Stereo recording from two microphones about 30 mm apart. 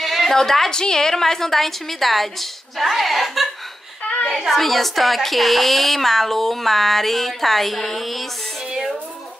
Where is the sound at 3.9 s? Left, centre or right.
Left.